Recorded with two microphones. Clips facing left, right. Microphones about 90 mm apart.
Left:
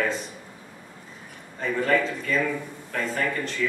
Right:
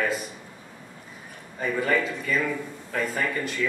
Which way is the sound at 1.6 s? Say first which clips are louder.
Left 1 dB; 5° right (ahead or behind).